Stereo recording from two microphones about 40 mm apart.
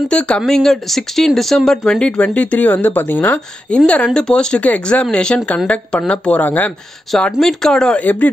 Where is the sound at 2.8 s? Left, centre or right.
Left.